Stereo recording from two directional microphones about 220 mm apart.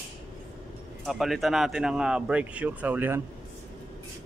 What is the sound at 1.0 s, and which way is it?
A man's voice, centre (ahead or behind).